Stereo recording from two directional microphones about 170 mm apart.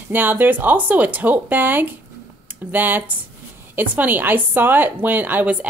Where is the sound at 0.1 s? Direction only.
10° right (ahead or behind).